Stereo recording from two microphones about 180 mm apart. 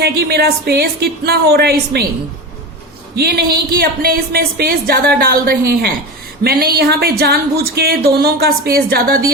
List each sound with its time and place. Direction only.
0.0 s speech: 60° right (ahead or behind)
3.2 s speech: 60° right (ahead or behind)